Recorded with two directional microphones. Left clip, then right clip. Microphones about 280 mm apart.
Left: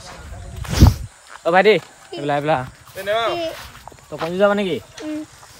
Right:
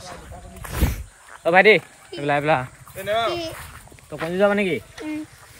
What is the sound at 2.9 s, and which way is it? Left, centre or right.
Speech, left.